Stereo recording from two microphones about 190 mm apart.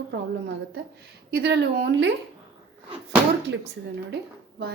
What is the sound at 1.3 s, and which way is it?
Speech, 55° right (ahead or behind).